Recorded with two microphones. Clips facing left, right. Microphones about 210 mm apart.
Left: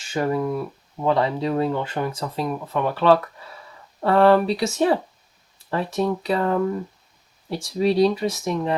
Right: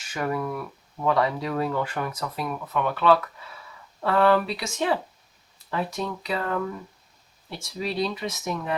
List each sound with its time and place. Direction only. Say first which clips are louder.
0.0 s speech: left 5 dB; 30° left (ahead or behind)